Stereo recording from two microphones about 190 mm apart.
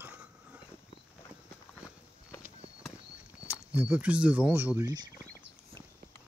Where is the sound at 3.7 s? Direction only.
5° right (ahead or behind).